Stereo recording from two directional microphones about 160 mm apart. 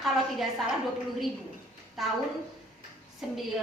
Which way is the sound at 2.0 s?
Centre (ahead or behind).